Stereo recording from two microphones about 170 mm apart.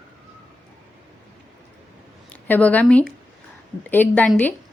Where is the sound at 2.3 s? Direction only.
10° left (ahead or behind).